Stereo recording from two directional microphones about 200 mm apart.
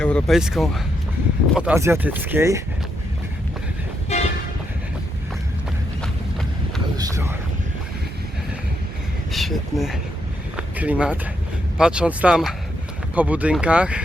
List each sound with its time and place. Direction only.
0.0 s speech: centre (ahead or behind)
4.1 s vehicle: 35° left (ahead or behind)
6.9 s speech: 15° right (ahead or behind)
9.3 s speech: centre (ahead or behind)